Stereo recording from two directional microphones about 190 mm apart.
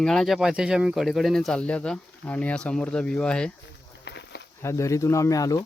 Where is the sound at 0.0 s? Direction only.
Centre (ahead or behind).